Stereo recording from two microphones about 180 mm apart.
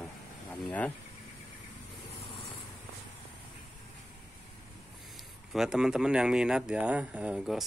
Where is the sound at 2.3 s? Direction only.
30° left (ahead or behind).